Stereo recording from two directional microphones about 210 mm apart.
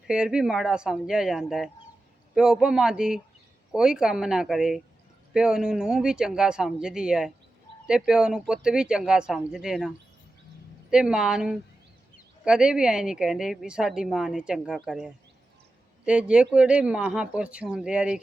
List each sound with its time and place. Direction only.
0.1 s a woman's voice: 5° right (ahead or behind)
10.9 s a woman's voice: 5° right (ahead or behind)